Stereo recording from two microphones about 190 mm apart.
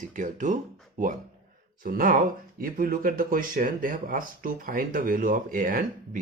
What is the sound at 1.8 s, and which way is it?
Speech, 50° right (ahead or behind).